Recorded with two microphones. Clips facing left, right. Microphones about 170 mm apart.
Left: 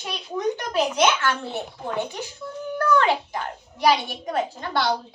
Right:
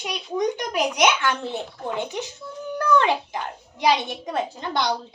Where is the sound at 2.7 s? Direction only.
20° right (ahead or behind).